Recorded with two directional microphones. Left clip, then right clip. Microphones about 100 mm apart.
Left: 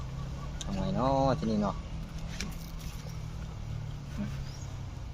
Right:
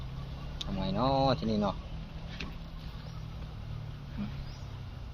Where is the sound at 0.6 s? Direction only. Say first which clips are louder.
Even; 40° right (ahead or behind); by 1.8 s 75° right (ahead or behind).